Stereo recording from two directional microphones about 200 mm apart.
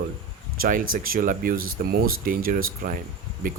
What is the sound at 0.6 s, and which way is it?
Speech, 40° right (ahead or behind).